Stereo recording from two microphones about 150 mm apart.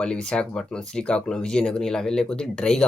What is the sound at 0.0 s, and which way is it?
Speech, 5° left (ahead or behind).